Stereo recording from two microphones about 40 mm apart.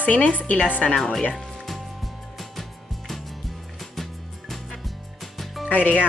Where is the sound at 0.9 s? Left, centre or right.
Centre.